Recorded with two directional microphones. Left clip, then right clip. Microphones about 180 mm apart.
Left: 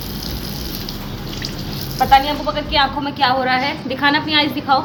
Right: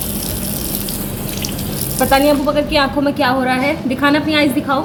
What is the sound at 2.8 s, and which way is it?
A woman's voice, 15° left (ahead or behind).